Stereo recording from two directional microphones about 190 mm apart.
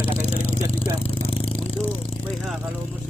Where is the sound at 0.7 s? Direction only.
30° left (ahead or behind).